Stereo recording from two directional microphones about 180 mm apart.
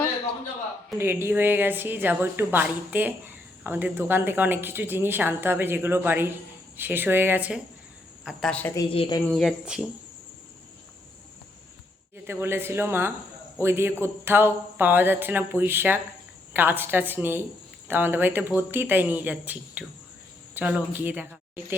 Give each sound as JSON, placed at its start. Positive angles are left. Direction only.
{"t": 0.9, "sound": "a woman's voice", "side_deg": -15}
{"t": 8.8, "sound": "speech", "side_deg": 30}
{"t": 9.3, "sound": "speech", "side_deg": 0}
{"t": 12.2, "sound": "a woman's voice", "side_deg": -10}